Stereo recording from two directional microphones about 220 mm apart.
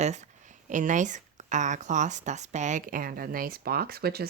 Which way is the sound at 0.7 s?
35° right (ahead or behind).